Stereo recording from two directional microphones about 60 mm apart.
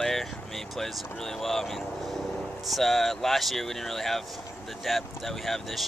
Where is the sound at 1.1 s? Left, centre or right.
Centre.